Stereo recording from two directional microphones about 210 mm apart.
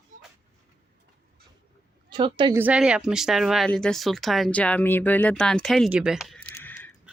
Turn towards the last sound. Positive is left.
turn(degrees=10)  # may be behind; listen again after turning